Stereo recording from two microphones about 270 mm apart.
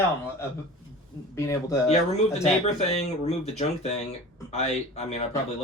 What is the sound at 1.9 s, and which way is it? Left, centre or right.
Speech, left.